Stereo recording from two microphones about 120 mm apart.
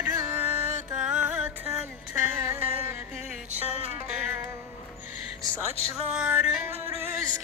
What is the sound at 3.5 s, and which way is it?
Music, 65° right (ahead or behind).